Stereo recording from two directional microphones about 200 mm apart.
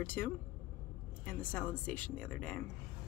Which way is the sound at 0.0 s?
10° left (ahead or behind).